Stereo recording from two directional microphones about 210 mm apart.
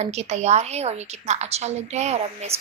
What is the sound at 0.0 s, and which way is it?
A woman's voice, 30° right (ahead or behind).